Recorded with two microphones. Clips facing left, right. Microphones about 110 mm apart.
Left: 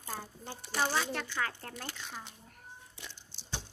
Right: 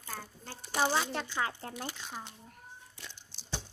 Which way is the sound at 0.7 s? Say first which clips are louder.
Right 2 dB; 15° right (ahead or behind).